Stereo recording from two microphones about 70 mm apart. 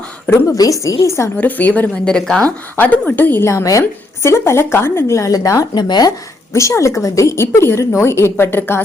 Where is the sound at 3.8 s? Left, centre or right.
Left.